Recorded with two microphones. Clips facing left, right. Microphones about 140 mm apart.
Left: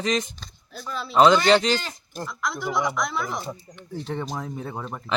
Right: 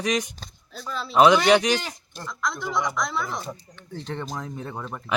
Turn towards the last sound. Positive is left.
turn(degrees=10)  # may be behind; listen again after turning